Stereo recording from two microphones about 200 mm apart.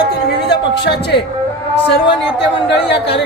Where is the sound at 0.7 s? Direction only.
60° left (ahead or behind).